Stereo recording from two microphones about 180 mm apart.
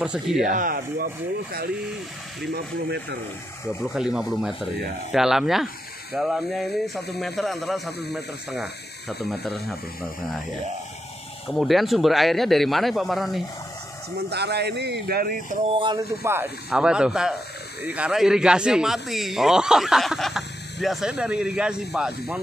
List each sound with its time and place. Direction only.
0.0 s speech: 5° right (ahead or behind)
0.5 s speech: 50° right (ahead or behind)
2.5 s speech: 70° right (ahead or behind)
3.8 s speech: 5° right (ahead or behind)
11.4 s speech: centre (ahead or behind)
14.1 s speech: 65° right (ahead or behind)
16.3 s speech: 10° right (ahead or behind)